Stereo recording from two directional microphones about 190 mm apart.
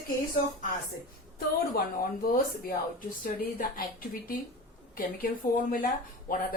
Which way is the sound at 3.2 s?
50° left (ahead or behind).